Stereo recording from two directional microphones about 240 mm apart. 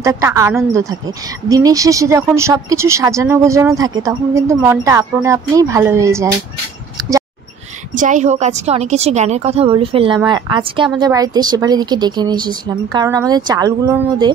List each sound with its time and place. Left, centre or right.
0.0 s speech: centre
7.0 s a sound: centre
7.9 s a woman's voice: right; by 14.3 s centre